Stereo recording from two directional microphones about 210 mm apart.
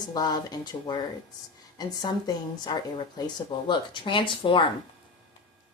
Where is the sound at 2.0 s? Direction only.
20° left (ahead or behind).